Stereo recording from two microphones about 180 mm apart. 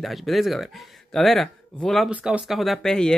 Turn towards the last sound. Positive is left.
turn(degrees=5)  # may be behind; listen again after turning